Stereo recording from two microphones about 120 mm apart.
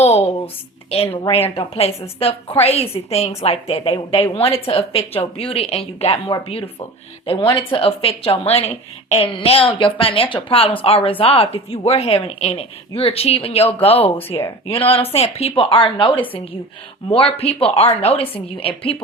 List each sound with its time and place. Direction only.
0.0 s a woman's voice: 60° left (ahead or behind)